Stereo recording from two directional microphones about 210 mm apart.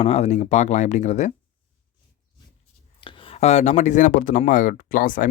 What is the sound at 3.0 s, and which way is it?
Speech, 25° left (ahead or behind).